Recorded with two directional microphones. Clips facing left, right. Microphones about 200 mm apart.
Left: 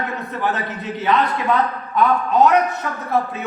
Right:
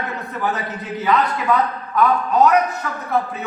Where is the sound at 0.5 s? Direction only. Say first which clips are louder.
Even; centre (ahead or behind).